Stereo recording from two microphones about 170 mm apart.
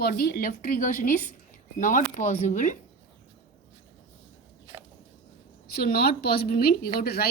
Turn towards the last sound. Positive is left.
turn(degrees=65)  # may be behind; listen again after turning